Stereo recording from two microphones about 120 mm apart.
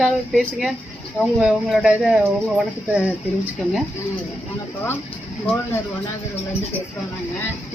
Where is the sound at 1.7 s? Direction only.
5° right (ahead or behind).